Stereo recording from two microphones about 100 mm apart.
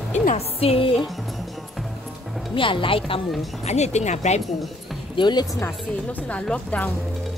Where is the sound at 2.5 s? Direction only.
60° left (ahead or behind).